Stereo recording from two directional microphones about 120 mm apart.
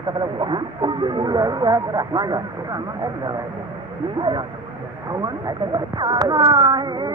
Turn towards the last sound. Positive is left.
turn(degrees=-35)  # may be behind; listen again after turning